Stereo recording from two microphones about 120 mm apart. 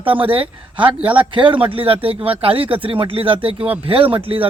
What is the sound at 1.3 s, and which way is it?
Speech, 45° right (ahead or behind).